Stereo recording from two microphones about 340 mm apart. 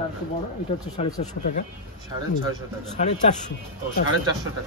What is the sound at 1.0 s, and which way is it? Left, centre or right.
Speech, left.